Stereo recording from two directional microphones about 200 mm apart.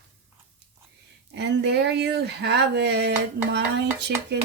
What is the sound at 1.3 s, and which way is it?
Speech, 60° right (ahead or behind).